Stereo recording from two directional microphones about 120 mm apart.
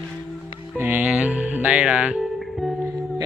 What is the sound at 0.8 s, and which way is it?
Speech, 15° right (ahead or behind).